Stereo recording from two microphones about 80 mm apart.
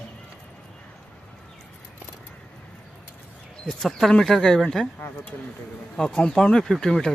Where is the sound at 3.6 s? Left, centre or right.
Centre.